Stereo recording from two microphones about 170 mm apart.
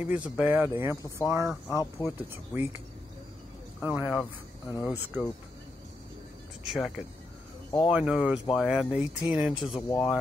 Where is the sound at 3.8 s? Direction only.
10° right (ahead or behind).